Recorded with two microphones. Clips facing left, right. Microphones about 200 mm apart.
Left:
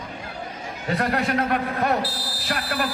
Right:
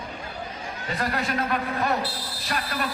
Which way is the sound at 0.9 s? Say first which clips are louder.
Left 4 dB; 60° left (ahead or behind).